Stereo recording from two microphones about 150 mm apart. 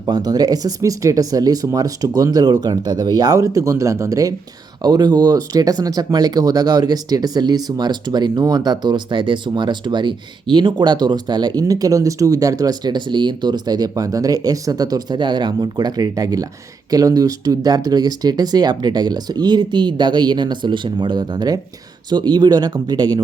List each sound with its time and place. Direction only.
0.0 s speech: 25° right (ahead or behind)